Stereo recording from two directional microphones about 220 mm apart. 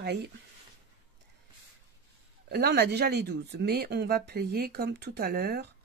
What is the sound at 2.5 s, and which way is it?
Speech, 45° right (ahead or behind).